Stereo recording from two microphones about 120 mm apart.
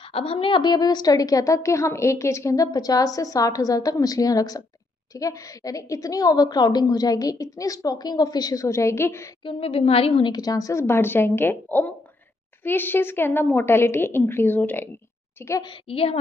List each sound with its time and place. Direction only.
0.0 s a woman's voice: 50° left (ahead or behind); by 9.3 s 20° left (ahead or behind)
9.4 s a woman's voice: 50° left (ahead or behind)
10.3 s a woman's voice: 30° left (ahead or behind)
15.6 s a woman's voice: 45° left (ahead or behind)